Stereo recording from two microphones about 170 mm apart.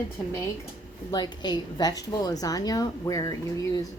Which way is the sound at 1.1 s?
25° left (ahead or behind).